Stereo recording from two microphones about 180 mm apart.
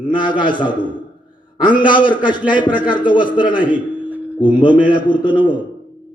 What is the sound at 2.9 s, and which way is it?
Speech, 25° left (ahead or behind).